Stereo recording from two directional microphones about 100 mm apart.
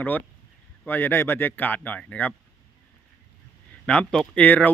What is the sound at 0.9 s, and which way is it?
Speech, 20° left (ahead or behind).